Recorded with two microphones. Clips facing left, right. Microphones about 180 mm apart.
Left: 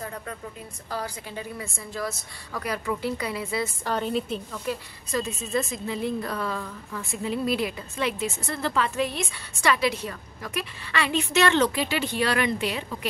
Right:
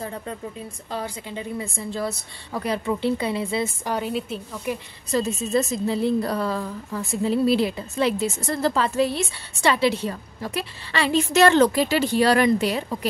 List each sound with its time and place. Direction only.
0.0 s a woman's voice: 25° right (ahead or behind)
3.8 s a woman's voice: 10° right (ahead or behind)
4.7 s a woman's voice: 15° right (ahead or behind)
5.1 s a woman's voice: 35° right (ahead or behind)